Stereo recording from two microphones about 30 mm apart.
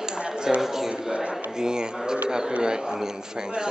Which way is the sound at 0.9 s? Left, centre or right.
Right.